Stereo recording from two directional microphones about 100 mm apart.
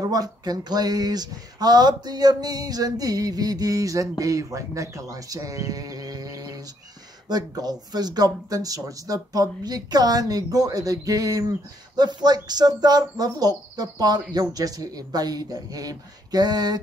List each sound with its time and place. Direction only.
0.0 s speech: 40° right (ahead or behind)